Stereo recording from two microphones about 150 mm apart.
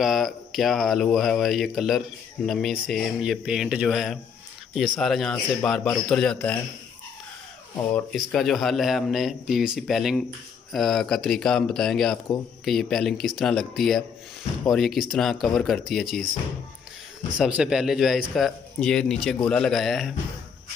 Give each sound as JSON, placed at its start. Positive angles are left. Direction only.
{"t": 0.0, "sound": "speech", "side_deg": 0}
{"t": 7.9, "sound": "speech", "side_deg": 5}
{"t": 17.4, "sound": "speech", "side_deg": -5}